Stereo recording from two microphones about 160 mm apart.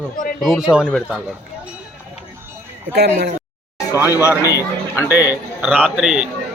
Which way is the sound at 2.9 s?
90° right.